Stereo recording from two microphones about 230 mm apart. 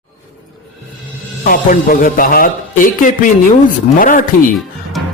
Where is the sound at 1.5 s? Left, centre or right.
Left.